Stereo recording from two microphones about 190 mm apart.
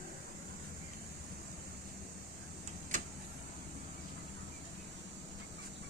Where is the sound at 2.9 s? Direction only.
45° right (ahead or behind).